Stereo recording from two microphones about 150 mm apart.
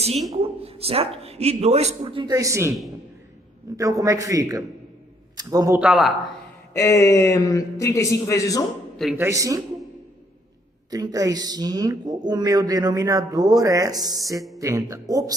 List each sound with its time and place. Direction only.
0.4 s a man's voice: 40° right (ahead or behind)
2.2 s speech: 20° right (ahead or behind)
3.8 s a man's voice: 20° right (ahead or behind)
5.8 s a man's voice: 5° right (ahead or behind)
6.7 s a man's voice: 20° left (ahead or behind)
9.1 s speech: 20° right (ahead or behind)
10.9 s speech: 25° right (ahead or behind)